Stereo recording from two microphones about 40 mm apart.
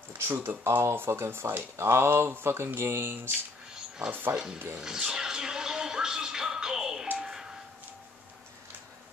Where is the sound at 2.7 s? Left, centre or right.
Right.